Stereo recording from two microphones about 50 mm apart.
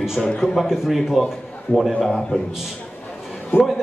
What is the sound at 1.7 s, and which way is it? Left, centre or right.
Speech, left.